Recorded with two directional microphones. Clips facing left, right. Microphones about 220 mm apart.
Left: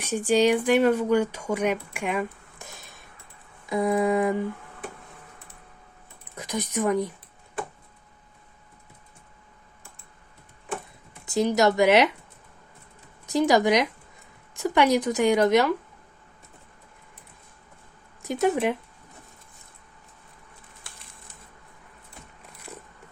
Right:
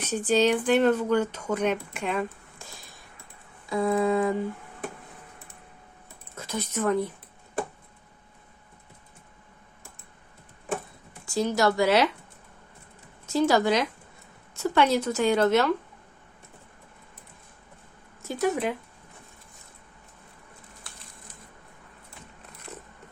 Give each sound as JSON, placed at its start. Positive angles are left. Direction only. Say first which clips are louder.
{"t": 0.0, "sound": "a woman's voice", "louder": "left 2 dB", "side_deg": 10}
{"t": 6.3, "sound": "a woman's voice", "louder": "left 3 dB", "side_deg": 15}
{"t": 11.3, "sound": "speech", "louder": "left 3 dB", "side_deg": 20}
{"t": 13.2, "sound": "a woman's voice", "louder": "left 2 dB", "side_deg": 15}
{"t": 18.2, "sound": "speech", "louder": "left 3 dB", "side_deg": 20}